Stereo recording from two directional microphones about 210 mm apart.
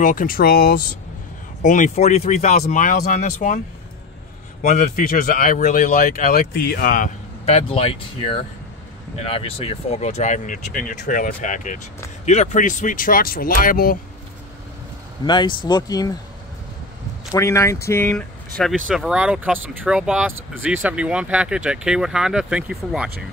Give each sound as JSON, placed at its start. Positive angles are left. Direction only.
{"t": 0.0, "sound": "speech", "side_deg": 40}
{"t": 7.4, "sound": "speech", "side_deg": 30}
{"t": 15.2, "sound": "speech", "side_deg": 20}
{"t": 17.3, "sound": "speech", "side_deg": 15}
{"t": 18.9, "sound": "speech", "side_deg": -5}